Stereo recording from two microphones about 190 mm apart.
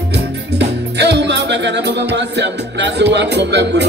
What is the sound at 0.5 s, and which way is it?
Music, 65° right (ahead or behind).